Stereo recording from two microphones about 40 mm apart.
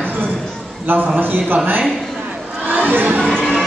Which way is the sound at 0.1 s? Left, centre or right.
Right.